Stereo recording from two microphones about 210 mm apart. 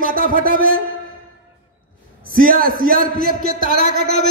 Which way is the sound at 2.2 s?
40° right (ahead or behind).